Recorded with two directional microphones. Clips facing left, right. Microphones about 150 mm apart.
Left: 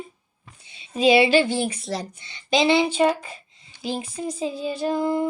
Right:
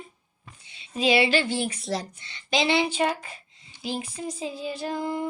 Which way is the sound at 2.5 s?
25° left (ahead or behind).